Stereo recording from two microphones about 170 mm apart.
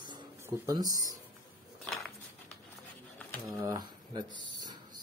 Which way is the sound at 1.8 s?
Centre (ahead or behind).